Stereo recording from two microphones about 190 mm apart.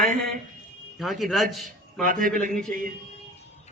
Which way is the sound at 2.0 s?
45° right (ahead or behind).